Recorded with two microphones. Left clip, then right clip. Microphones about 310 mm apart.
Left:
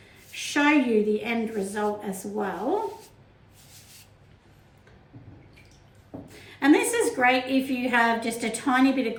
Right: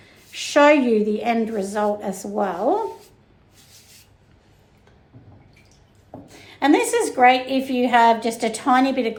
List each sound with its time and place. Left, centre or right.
0.3 s a woman's voice: centre
6.6 s a woman's voice: centre